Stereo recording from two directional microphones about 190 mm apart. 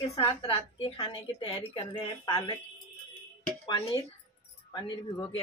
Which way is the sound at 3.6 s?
25° left (ahead or behind).